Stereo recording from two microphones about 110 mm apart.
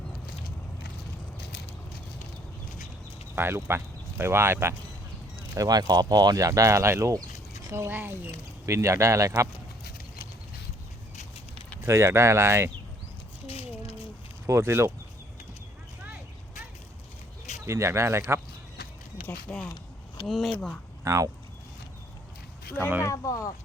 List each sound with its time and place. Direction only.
3.3 s speech: 20° right (ahead or behind)
5.5 s speech: 35° right (ahead or behind)
11.8 s speech: 25° right (ahead or behind)
13.5 s a sound: 60° left (ahead or behind)
14.4 s speech: 25° right (ahead or behind)
17.7 s speech: 25° right (ahead or behind)
19.3 s speech: 15° left (ahead or behind)
19.6 s a sound: 40° left (ahead or behind)
20.2 s speech: centre (ahead or behind)
21.0 s speech: 30° right (ahead or behind)
23.0 s speech: 30° left (ahead or behind)